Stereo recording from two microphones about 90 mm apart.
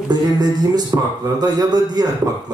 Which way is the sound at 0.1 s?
50° right (ahead or behind).